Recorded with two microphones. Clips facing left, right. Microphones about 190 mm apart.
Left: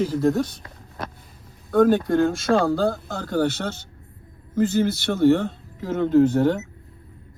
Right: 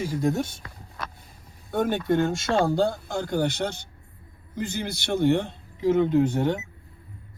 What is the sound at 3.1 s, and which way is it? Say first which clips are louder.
Speech: left 3 dB; 15° right (ahead or behind).